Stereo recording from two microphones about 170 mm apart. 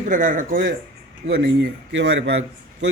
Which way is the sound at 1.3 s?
90° right.